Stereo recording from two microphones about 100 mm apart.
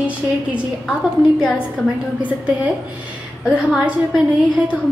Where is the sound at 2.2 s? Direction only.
15° right (ahead or behind).